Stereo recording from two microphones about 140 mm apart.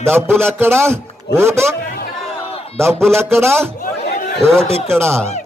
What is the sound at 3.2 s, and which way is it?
Speech, 15° right (ahead or behind).